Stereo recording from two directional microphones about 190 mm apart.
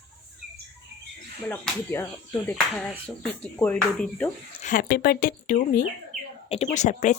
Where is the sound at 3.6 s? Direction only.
5° left (ahead or behind).